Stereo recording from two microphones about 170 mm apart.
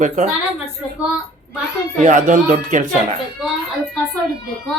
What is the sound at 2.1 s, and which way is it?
Speech, 50° right (ahead or behind).